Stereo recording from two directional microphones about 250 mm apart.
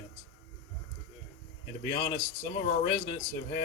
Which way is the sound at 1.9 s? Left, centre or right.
Left.